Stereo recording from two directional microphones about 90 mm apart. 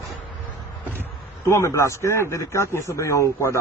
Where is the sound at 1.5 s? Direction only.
30° left (ahead or behind).